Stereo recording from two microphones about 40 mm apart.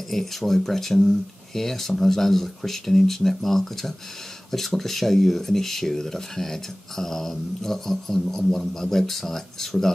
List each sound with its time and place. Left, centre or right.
0.1 s speech: centre